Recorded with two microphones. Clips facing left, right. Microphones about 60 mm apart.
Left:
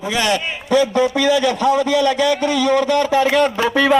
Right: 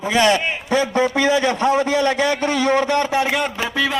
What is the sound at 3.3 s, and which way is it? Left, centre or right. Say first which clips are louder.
Speech: left 6 dB; centre.